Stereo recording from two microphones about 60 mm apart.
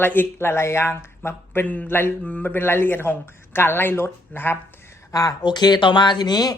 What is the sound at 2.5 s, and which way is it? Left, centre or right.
Speech, left.